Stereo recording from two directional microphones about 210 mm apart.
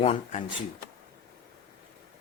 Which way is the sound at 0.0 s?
35° left (ahead or behind).